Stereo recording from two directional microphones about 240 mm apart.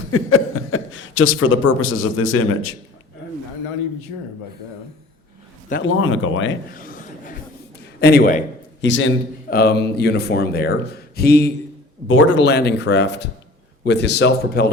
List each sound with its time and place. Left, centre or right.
0.1 s speech: left
5.8 s speech: left
6.7 s a sound: left
8.0 s speech: left
8.8 s a man's voice: left
9.5 s a man's voice: left
12.0 s a man's voice: left